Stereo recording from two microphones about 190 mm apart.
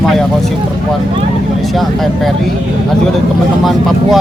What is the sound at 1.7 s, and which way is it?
Speech, centre (ahead or behind).